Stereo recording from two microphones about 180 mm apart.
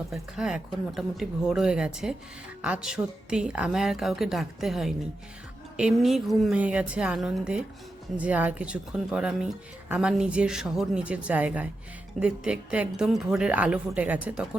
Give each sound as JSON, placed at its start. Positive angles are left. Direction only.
{"t": 0.1, "sound": "speech", "side_deg": -5}